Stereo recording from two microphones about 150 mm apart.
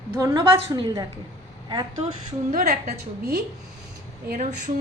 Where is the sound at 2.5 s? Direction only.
75° right (ahead or behind).